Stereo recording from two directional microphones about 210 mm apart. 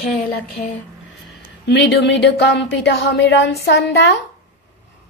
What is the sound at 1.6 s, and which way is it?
Speech, 55° left (ahead or behind).